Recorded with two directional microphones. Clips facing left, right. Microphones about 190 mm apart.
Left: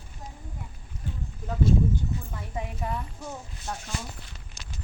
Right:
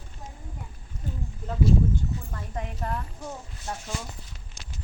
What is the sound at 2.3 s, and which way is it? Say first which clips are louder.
Speech: even; 5° left (ahead or behind).